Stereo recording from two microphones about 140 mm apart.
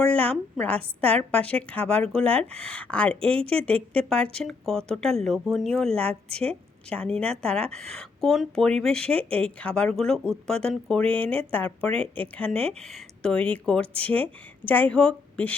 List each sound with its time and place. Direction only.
0.0 s speech: 10° left (ahead or behind)
6.2 s a woman's voice: 45° right (ahead or behind)
6.9 s speech: 5° left (ahead or behind)